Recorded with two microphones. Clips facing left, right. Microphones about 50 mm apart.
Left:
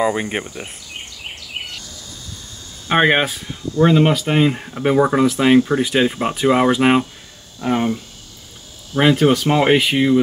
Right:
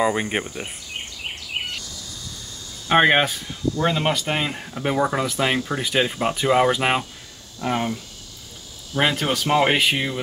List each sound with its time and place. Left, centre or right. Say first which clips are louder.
0.0 s speech: left 2 dB; centre
1.9 s bird: left 1 dB; left
2.9 s speech: left 1 dB; centre
9.0 s speech: left 8 dB; centre